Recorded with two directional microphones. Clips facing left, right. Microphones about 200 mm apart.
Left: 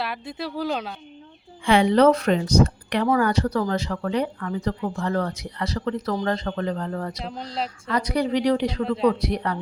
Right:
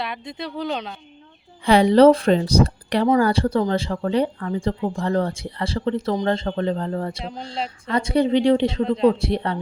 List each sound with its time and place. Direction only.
0.0 s speech: 5° left (ahead or behind)
1.6 s speech: 35° right (ahead or behind)